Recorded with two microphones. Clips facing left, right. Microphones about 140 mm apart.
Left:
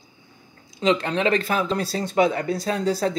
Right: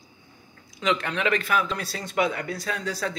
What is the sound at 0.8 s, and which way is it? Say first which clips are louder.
Speech: left 5 dB; 30° left (ahead or behind).